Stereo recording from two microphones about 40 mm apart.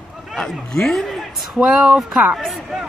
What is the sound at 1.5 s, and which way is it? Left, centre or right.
Speech, centre.